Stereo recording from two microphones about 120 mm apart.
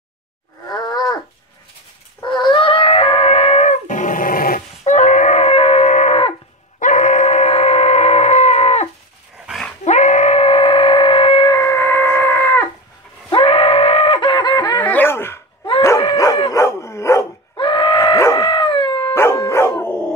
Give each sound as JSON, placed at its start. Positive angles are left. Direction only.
{"t": 0.7, "sound": "a sound", "side_deg": 35}
{"t": 2.2, "sound": "a sound", "side_deg": 40}
{"t": 6.8, "sound": "dog", "side_deg": 85}
{"t": 9.8, "sound": "screaming", "side_deg": 80}
{"t": 11.5, "sound": "a sound", "side_deg": 20}
{"t": 13.3, "sound": "screaming", "side_deg": 50}
{"t": 14.3, "sound": "snicker", "side_deg": 40}
{"t": 14.9, "sound": "dog", "side_deg": 15}
{"t": 17.6, "sound": "groan", "side_deg": 40}
{"t": 18.0, "sound": "dog", "side_deg": 25}
{"t": 18.9, "sound": "dog", "side_deg": 20}